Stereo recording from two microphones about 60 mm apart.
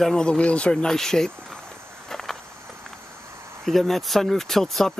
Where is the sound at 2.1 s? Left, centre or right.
Centre.